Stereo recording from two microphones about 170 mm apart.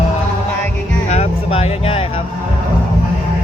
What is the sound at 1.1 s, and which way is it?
Speech, 40° left (ahead or behind).